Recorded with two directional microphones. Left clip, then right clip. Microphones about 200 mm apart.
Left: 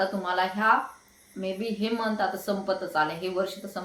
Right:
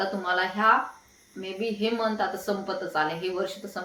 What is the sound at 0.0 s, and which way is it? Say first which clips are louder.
A woman's voice: even; centre (ahead or behind).